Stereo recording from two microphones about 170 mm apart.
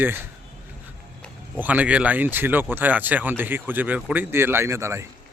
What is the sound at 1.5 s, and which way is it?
A man's voice, 10° right (ahead or behind).